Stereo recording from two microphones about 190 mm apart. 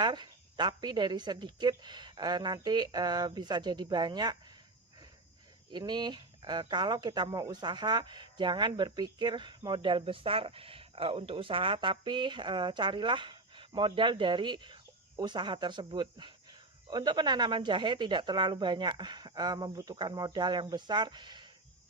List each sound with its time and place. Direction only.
0.0 s speech: 25° right (ahead or behind)
5.7 s speech: 25° right (ahead or behind)